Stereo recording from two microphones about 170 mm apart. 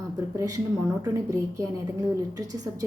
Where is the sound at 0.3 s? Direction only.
20° right (ahead or behind).